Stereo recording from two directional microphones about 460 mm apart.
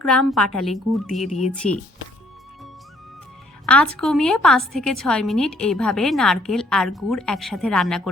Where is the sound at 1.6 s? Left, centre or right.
Left.